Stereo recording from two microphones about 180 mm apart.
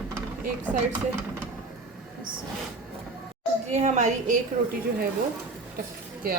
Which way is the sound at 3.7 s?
40° right (ahead or behind).